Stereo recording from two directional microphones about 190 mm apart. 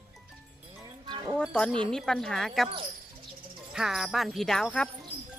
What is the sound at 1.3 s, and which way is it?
Speech, centre (ahead or behind).